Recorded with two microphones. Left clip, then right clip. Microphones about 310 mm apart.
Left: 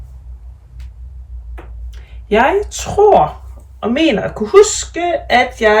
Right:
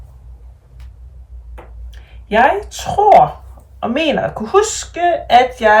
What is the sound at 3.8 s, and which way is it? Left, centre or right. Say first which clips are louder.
Speech: left 1 dB; centre.